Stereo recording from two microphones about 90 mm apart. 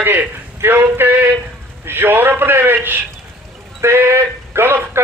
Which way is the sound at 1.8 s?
25° right (ahead or behind).